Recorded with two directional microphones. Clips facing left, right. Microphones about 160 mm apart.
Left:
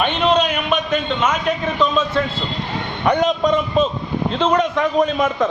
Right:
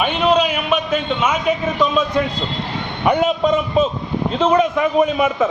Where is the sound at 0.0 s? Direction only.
5° right (ahead or behind).